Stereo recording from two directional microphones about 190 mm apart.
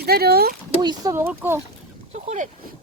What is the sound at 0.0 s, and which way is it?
Speech, 55° right (ahead or behind).